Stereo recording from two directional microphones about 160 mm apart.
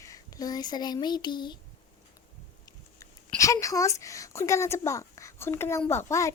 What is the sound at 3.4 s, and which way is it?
Speech, 20° left (ahead or behind).